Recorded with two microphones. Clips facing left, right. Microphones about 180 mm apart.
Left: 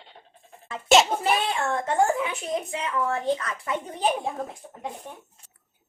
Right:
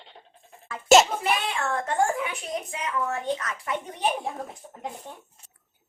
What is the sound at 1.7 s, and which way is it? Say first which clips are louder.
A woman's voice: left 2 dB; 25° left (ahead or behind).